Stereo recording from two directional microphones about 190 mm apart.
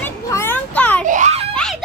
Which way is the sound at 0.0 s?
10° left (ahead or behind).